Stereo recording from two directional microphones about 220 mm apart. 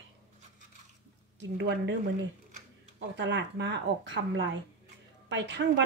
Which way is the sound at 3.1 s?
55° right (ahead or behind).